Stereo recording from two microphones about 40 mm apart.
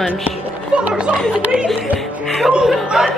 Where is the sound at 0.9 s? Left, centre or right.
Right.